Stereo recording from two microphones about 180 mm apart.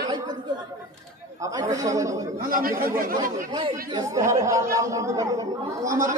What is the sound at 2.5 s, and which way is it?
Speech, 50° right (ahead or behind).